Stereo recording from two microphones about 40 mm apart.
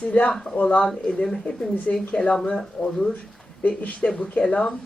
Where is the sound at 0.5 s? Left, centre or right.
Left.